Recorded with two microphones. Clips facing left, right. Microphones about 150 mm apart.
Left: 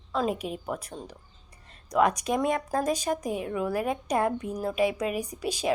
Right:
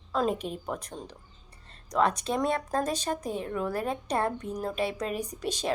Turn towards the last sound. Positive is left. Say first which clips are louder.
# left 3 dB
turn(degrees=10)  # may be behind; listen again after turning